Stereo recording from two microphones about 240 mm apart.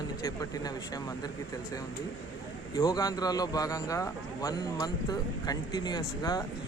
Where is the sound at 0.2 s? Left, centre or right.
Centre.